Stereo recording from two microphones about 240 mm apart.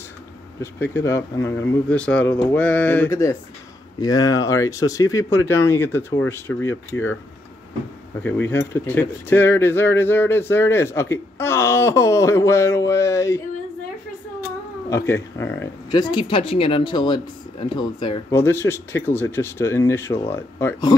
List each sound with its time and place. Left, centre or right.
0.6 s speech: centre
8.2 s speech: centre
14.9 s speech: centre